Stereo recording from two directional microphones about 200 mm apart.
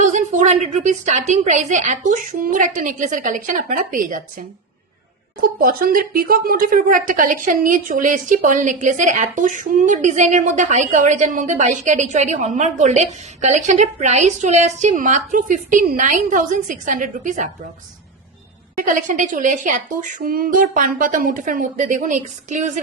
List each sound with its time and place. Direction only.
0.0 s a sound: 35° right (ahead or behind)
1.3 s speech: 35° right (ahead or behind)
18.8 s speech: 40° right (ahead or behind)